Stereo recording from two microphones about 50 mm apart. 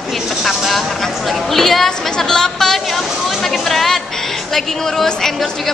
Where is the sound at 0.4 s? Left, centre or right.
Centre.